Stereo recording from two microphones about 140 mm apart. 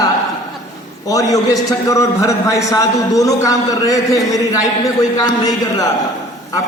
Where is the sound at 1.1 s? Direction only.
25° left (ahead or behind).